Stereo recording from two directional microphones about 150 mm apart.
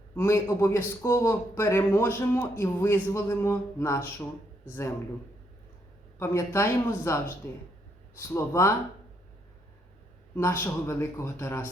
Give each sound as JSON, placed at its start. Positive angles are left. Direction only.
{"t": 0.2, "sound": "a man's voice", "side_deg": 15}
{"t": 6.1, "sound": "a man's voice", "side_deg": 15}
{"t": 10.3, "sound": "a man's voice", "side_deg": 15}